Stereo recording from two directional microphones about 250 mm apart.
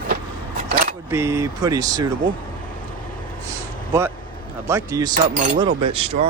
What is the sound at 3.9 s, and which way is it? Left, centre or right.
Speech, centre.